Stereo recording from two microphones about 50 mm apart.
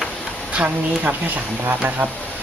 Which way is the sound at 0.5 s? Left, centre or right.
Right.